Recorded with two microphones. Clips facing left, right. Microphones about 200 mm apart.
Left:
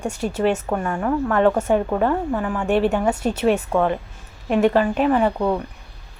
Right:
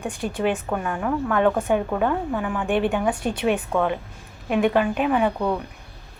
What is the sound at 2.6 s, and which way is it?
Speech, 45° left (ahead or behind).